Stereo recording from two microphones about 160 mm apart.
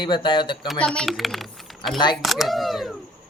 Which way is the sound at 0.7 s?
5° left (ahead or behind).